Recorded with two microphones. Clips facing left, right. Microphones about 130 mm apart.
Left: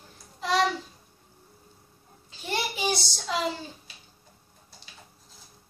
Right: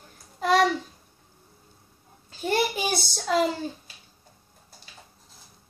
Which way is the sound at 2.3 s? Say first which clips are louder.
Right 7 dB; 45° right (ahead or behind).